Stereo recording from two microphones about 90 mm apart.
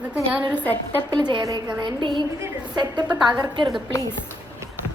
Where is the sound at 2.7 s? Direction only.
50° right (ahead or behind).